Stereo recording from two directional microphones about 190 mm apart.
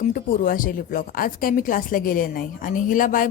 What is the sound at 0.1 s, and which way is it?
Speech, 45° left (ahead or behind).